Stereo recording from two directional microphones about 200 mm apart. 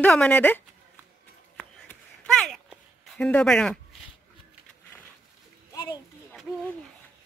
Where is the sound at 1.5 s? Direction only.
5° left (ahead or behind).